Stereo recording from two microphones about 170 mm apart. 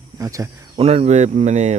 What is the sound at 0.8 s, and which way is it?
Speech, 35° right (ahead or behind).